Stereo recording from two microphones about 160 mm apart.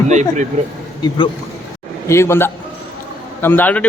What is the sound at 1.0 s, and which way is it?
Speech, 25° left (ahead or behind).